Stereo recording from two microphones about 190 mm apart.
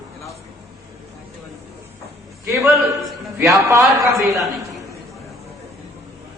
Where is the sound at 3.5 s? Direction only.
15° right (ahead or behind).